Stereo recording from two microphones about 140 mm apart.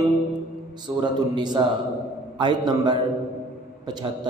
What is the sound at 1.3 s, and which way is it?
Mantra, 35° right (ahead or behind).